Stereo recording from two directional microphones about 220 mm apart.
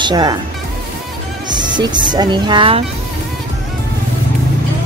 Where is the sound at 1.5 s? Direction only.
20° right (ahead or behind).